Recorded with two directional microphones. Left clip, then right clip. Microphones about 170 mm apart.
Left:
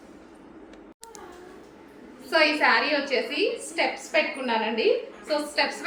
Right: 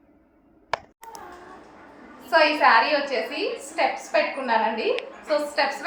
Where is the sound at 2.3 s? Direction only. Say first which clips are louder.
Right 3 dB; 25° left (ahead or behind).